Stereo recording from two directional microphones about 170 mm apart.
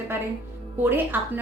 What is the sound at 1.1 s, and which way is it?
Speech, 10° right (ahead or behind).